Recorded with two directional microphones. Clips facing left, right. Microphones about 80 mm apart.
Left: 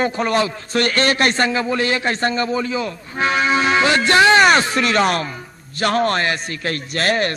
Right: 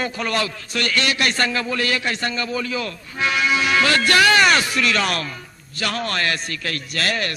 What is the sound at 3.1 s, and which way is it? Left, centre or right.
Music, left.